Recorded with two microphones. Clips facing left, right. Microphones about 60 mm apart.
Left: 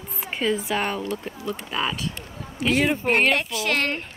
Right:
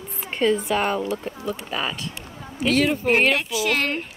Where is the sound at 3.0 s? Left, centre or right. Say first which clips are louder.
Right 1 dB; centre.